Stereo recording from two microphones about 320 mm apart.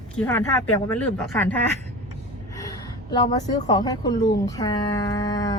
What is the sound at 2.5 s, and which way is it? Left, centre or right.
A woman's voice, centre.